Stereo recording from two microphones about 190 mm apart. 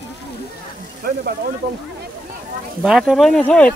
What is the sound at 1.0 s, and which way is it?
Speech, 50° right (ahead or behind).